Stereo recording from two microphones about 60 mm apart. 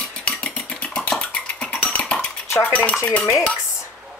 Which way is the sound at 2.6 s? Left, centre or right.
Left.